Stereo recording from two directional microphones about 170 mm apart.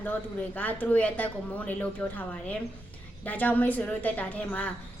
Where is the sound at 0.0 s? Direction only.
10° left (ahead or behind).